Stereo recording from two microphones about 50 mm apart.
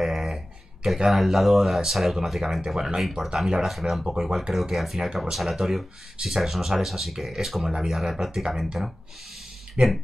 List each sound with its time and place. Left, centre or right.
0.0 s a sound: centre
0.8 s speech: centre
9.8 s speech: right